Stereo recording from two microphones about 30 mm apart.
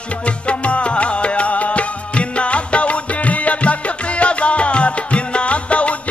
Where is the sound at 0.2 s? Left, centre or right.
Left.